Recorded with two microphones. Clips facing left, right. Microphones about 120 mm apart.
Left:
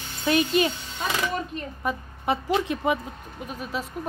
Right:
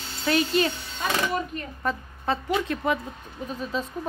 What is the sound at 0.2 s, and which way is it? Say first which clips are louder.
Speech: left 1 dB; 20° left (ahead or behind).